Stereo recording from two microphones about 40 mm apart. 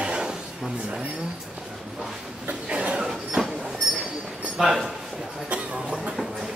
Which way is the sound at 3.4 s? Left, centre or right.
Centre.